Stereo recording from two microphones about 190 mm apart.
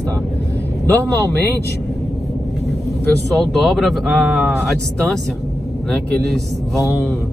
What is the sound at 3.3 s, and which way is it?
Speech, centre (ahead or behind).